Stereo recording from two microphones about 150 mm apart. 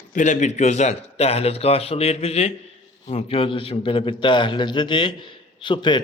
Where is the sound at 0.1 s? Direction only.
55° left (ahead or behind).